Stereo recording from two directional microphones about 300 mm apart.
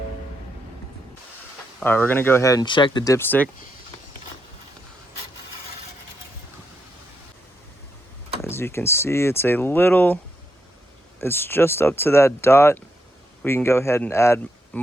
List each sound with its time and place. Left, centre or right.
1.8 s speech: centre
8.4 s speech: centre
11.2 s speech: centre